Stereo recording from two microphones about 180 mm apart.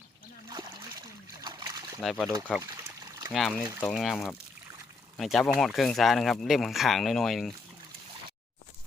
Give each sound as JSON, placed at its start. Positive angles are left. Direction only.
{"t": 0.5, "sound": "splash", "side_deg": -20}
{"t": 2.0, "sound": "speech", "side_deg": 0}
{"t": 2.6, "sound": "trickle", "side_deg": -15}
{"t": 3.3, "sound": "speech", "side_deg": 5}